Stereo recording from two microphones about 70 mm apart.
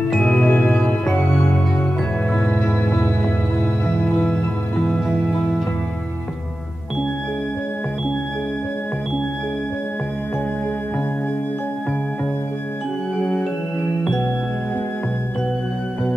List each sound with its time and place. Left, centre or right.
0.1 s music: centre
0.4 s music: left
1.1 s music: left
2.3 s music: centre
13.2 s music: centre